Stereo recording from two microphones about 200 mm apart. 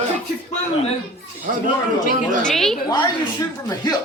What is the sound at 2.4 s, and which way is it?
Speech, centre (ahead or behind).